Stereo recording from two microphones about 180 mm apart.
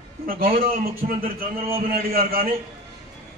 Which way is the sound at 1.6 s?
30° right (ahead or behind).